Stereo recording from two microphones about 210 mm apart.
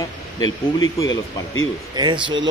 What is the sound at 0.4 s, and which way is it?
Speech, 15° left (ahead or behind).